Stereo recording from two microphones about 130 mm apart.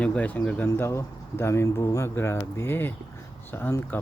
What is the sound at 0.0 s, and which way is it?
Speech, 10° left (ahead or behind).